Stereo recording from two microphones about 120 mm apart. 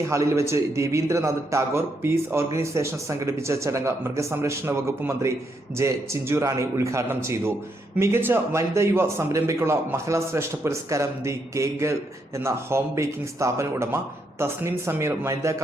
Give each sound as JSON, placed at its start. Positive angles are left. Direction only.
{"t": 0.1, "sound": "a man's voice", "side_deg": -25}